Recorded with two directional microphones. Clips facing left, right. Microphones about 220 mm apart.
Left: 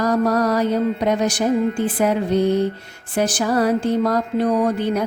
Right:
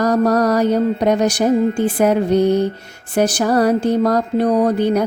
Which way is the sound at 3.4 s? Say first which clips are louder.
Right 2 dB; 40° right (ahead or behind).